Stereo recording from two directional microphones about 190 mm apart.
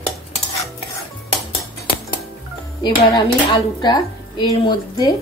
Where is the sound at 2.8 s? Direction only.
25° left (ahead or behind).